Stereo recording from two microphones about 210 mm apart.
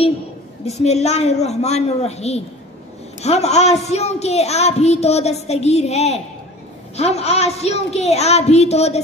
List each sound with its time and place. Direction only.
0.7 s a woman's voice: 30° left (ahead or behind)